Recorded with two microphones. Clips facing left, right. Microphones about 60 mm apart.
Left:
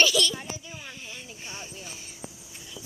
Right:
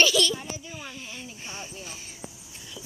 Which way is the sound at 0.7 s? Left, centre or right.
Centre.